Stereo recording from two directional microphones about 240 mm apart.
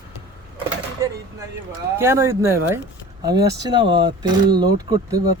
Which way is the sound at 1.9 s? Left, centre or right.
Centre.